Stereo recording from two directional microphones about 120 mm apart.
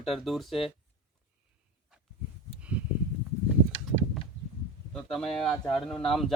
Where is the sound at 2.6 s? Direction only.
10° right (ahead or behind).